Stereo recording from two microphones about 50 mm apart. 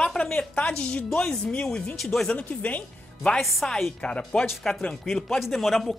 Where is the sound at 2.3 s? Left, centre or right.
Left.